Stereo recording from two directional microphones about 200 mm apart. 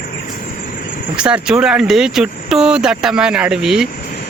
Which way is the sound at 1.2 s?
5° right (ahead or behind).